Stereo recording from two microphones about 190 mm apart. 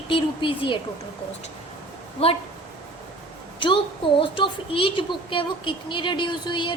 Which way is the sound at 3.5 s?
25° left (ahead or behind).